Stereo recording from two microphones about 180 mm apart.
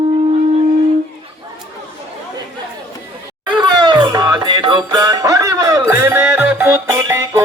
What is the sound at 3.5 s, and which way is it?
Music, 25° right (ahead or behind).